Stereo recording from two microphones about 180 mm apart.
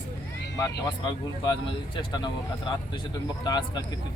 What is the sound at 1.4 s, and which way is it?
Speech, 25° left (ahead or behind).